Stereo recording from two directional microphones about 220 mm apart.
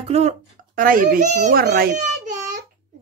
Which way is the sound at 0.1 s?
30° right (ahead or behind).